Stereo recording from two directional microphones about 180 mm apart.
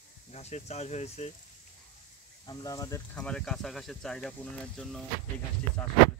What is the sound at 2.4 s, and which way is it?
Speech, 20° left (ahead or behind).